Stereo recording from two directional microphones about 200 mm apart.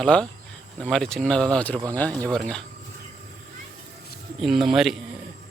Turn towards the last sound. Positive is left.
turn(degrees=0)  # may be behind; listen again after turning